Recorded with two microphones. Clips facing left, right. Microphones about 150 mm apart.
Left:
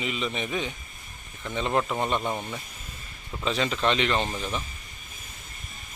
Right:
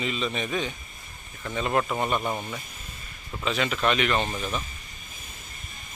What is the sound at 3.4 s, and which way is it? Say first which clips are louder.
Speech: even; 30° left (ahead or behind).